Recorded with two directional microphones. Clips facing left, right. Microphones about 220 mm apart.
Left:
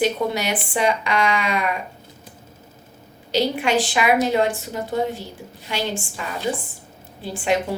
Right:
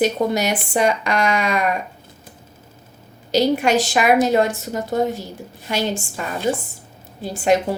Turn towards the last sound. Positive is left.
turn(degrees=-40)  # may be behind; listen again after turning